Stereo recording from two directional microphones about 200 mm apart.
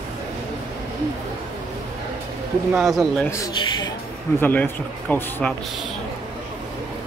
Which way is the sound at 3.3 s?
15° left (ahead or behind).